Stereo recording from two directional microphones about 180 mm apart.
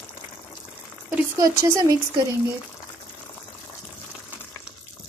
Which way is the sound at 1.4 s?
15° right (ahead or behind).